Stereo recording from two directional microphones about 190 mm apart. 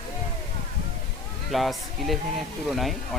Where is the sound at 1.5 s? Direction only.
Centre (ahead or behind).